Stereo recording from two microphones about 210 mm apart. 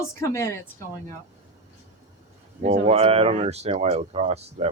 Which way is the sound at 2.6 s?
35° right (ahead or behind).